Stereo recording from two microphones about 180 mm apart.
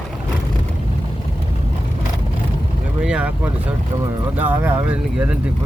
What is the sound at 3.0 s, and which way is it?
Vehicle, 10° right (ahead or behind).